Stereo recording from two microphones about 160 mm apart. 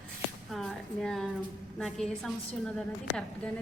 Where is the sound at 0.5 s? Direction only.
Centre (ahead or behind).